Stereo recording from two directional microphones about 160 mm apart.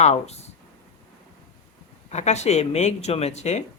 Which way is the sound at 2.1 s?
45° left (ahead or behind).